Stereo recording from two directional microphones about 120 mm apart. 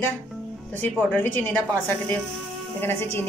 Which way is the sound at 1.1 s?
15° left (ahead or behind).